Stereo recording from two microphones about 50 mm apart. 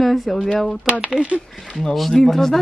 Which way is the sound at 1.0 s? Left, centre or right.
Centre.